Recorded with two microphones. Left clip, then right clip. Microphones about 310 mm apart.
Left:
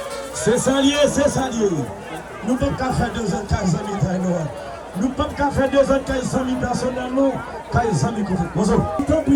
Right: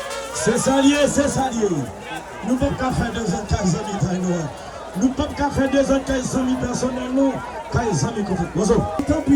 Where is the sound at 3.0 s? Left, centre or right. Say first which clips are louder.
Left 1 dB; left.